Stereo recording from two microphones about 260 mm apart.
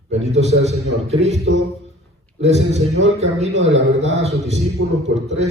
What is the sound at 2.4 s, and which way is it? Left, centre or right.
A man's voice, right.